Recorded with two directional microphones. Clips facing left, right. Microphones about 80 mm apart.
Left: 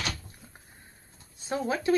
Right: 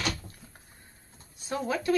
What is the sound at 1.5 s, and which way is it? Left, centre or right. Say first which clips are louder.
Speech: left 1 dB; left.